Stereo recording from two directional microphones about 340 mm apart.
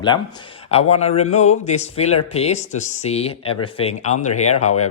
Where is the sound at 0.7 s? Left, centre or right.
Centre.